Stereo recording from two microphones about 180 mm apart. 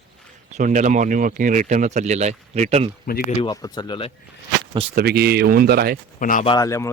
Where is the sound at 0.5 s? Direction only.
45° right (ahead or behind).